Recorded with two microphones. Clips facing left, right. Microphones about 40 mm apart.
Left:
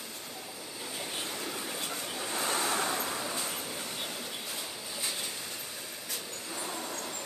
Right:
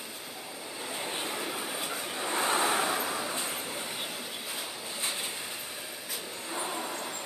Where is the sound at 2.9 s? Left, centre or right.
Centre.